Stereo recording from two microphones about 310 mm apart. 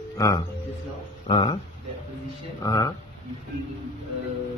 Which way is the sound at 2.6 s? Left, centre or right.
Centre.